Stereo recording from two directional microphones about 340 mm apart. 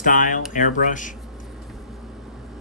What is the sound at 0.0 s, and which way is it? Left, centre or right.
Speech, left.